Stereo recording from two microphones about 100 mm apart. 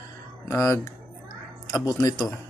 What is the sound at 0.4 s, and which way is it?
Speech, 30° left (ahead or behind).